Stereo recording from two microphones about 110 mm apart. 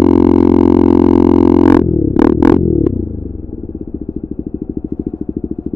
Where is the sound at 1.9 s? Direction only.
40° left (ahead or behind).